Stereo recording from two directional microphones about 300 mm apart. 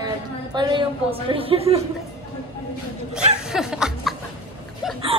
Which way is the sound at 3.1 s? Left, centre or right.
Centre.